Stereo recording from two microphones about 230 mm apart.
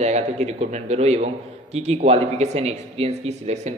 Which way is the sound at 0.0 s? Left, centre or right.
Right.